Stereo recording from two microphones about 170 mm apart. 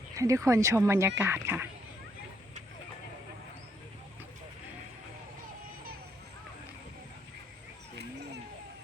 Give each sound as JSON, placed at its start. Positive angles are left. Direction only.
{"t": 0.2, "sound": "speech", "side_deg": -20}